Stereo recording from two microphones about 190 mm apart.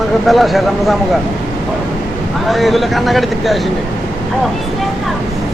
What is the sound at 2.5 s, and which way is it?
Speech, centre (ahead or behind).